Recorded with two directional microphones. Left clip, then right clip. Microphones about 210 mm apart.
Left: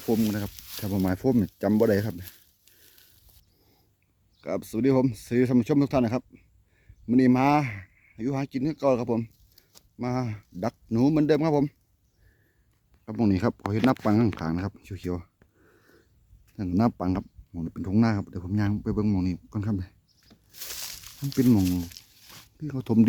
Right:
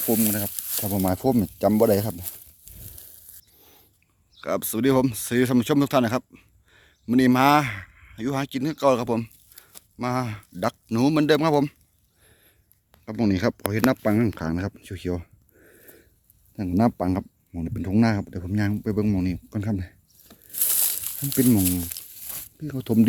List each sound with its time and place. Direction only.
0.1 s speech: centre (ahead or behind)
4.4 s speech: 5° left (ahead or behind)
13.1 s speech: 10° left (ahead or behind)
20.2 s tearing: 50° right (ahead or behind)
21.8 s crumpling: 55° right (ahead or behind)
22.5 s speech: 5° left (ahead or behind)